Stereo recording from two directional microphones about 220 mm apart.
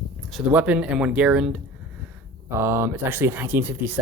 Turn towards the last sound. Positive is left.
turn(degrees=-10)  # may be behind; listen again after turning